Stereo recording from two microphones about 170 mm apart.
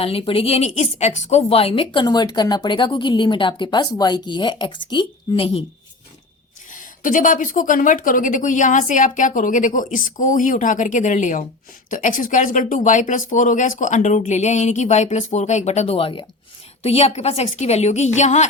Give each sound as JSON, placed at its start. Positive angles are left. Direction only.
{"t": 0.0, "sound": "a woman's voice", "side_deg": 35}
{"t": 6.7, "sound": "a woman's voice", "side_deg": 50}